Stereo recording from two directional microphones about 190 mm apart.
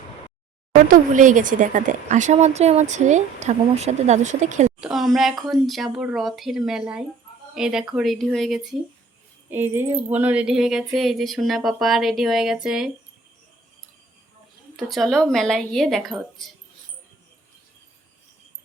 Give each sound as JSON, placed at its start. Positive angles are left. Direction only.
{"t": 0.9, "sound": "speech", "side_deg": -45}
{"t": 4.8, "sound": "speech", "side_deg": 0}
{"t": 9.5, "sound": "speech", "side_deg": -10}
{"t": 14.8, "sound": "speech", "side_deg": 0}